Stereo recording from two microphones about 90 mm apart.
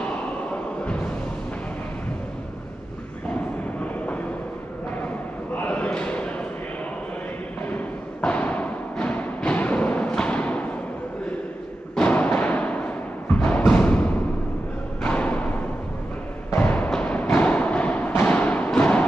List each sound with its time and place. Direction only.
3.8 s train: 15° left (ahead or behind)
5.6 s a sound: 15° left (ahead or behind)
7.7 s music: 15° left (ahead or behind)
11.9 s timpani: 15° left (ahead or behind)
13.4 s music: 15° left (ahead or behind)
16.5 s a sound: 20° left (ahead or behind)
18.3 s music: 15° left (ahead or behind)